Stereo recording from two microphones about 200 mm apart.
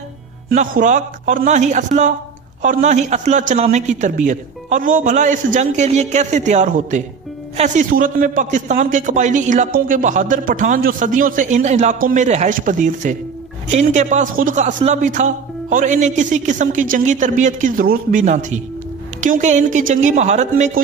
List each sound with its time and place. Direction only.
0.5 s a man's voice: 40° right (ahead or behind)